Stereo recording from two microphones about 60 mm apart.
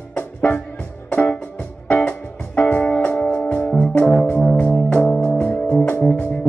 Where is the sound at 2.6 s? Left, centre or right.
Left.